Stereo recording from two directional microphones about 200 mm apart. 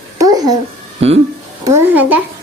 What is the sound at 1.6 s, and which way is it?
Speech, 10° right (ahead or behind).